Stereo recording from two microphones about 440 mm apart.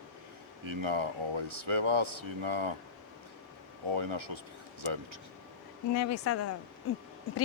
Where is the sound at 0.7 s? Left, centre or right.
Right.